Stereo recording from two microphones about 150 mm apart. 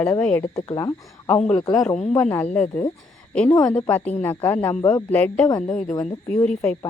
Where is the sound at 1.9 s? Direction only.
45° left (ahead or behind).